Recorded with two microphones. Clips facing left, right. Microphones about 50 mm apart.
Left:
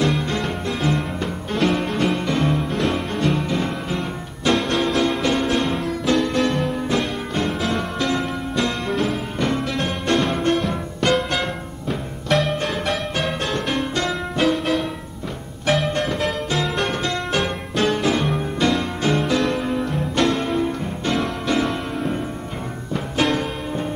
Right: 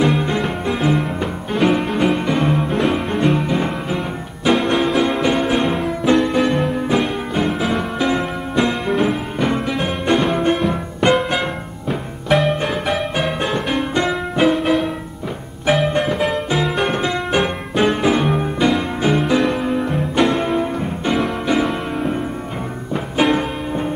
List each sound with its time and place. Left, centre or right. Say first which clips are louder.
0.0 s music: right 4 dB; centre